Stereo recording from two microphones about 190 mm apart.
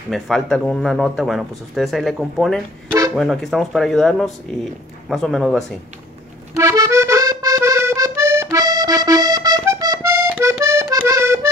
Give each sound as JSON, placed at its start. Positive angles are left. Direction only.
{"t": 0.1, "sound": "speech", "side_deg": 5}
{"t": 6.5, "sound": "accordion", "side_deg": -15}